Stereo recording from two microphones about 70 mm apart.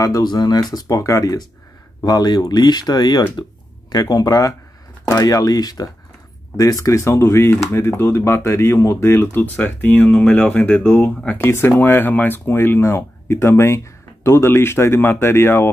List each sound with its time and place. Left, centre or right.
0.0 s speech: left
2.0 s speech: left
3.9 s speech: left
6.5 s speech: left
9.4 s speech: left
11.3 s speech: left